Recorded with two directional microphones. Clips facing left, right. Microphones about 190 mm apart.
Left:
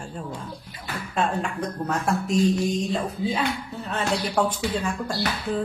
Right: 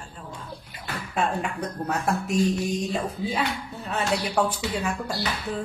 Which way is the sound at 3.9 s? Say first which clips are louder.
Even; 10° right (ahead or behind).